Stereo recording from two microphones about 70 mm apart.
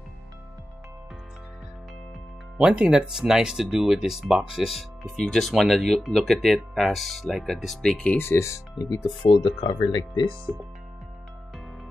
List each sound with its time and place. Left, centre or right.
2.5 s speech: centre
5.5 s speech: centre
8.2 s speech: left
9.6 s speech: left
10.5 s speech: right